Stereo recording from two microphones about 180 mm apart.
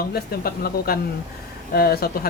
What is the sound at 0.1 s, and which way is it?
Speech, 55° left (ahead or behind).